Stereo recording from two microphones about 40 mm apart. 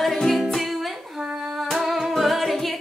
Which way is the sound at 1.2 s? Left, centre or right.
Centre.